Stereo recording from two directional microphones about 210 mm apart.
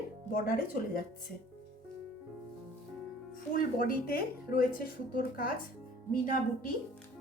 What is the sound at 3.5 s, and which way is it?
Speech, 45° left (ahead or behind).